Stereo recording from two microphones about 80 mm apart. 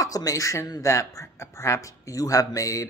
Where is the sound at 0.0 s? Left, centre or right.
Left.